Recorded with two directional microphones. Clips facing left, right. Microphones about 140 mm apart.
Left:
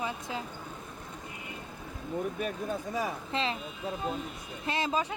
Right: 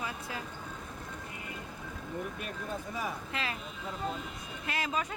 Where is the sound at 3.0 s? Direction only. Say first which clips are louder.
Left 6 dB; 25° left (ahead or behind).